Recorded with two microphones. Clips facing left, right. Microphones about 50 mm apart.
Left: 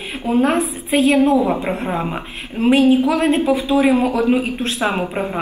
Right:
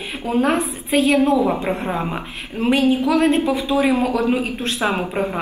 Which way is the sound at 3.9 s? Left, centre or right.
Left.